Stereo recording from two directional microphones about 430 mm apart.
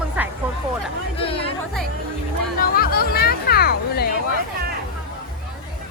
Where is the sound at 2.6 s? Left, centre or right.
Left.